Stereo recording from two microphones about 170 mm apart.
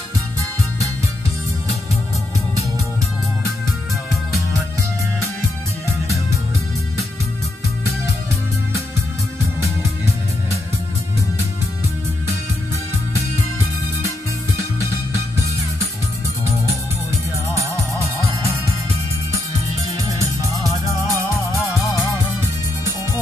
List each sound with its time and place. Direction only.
14.6 s music: 15° right (ahead or behind)
19.9 s music: 20° right (ahead or behind)